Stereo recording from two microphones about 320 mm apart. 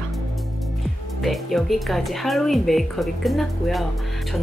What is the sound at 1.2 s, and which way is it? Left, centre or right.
Speech, centre.